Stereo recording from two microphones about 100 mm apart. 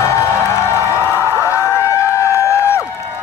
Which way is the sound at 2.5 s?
30° left (ahead or behind).